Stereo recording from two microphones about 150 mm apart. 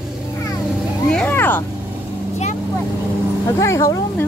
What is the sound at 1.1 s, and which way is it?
Cat, 15° left (ahead or behind).